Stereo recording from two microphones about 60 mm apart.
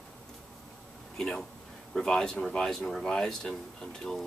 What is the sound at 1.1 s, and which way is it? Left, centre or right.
A man's voice, centre.